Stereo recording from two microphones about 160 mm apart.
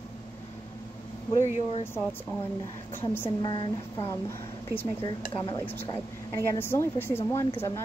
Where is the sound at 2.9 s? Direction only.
15° left (ahead or behind).